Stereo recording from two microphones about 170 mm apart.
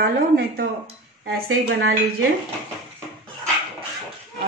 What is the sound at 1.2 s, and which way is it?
Speech, 75° right (ahead or behind).